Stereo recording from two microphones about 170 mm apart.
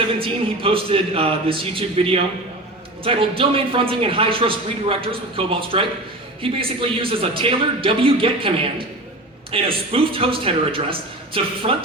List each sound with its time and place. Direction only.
0.2 s a man's voice: 30° right (ahead or behind)